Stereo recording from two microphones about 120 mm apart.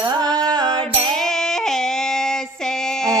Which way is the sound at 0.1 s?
35° right (ahead or behind).